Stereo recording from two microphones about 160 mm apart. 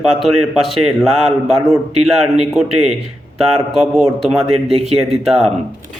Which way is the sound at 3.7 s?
Centre (ahead or behind).